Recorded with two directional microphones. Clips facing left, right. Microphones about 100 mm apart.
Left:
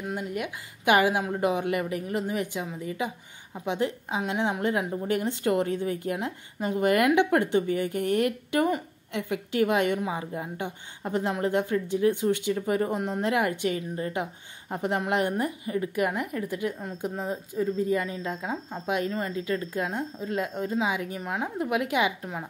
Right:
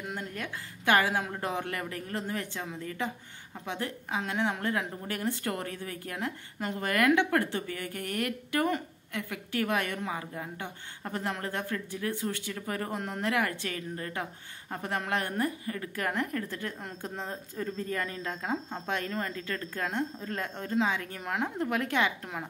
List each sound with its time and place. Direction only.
0.1 s a woman's voice: 15° left (ahead or behind)